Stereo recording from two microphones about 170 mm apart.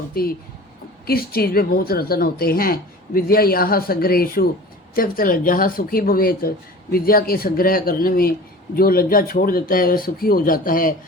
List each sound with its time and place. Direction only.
0.1 s speech: 60° left (ahead or behind)